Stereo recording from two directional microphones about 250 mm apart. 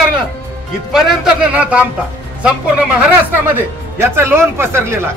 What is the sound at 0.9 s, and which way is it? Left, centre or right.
Speech, centre.